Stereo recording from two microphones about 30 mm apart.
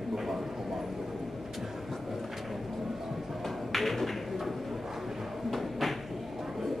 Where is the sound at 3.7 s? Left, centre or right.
Centre.